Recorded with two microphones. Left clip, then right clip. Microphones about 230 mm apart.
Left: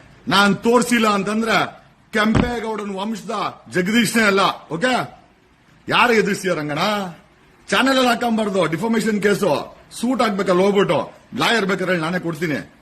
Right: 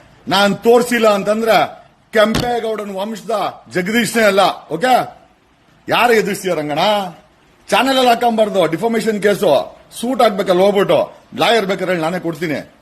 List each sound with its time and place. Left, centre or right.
0.3 s a man's voice: centre